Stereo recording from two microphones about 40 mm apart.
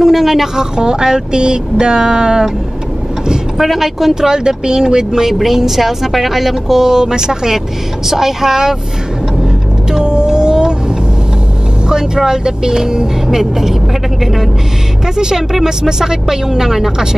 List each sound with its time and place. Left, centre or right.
0.0 s speech: centre
3.6 s speech: centre
4.1 s a woman's voice: centre
9.4 s vehicle: centre
11.9 s a woman's voice: centre
15.1 s a woman's voice: centre